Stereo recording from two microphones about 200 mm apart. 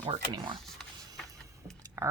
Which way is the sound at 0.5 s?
Centre (ahead or behind).